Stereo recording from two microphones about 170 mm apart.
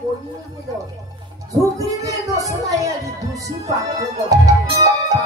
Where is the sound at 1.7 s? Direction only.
20° right (ahead or behind).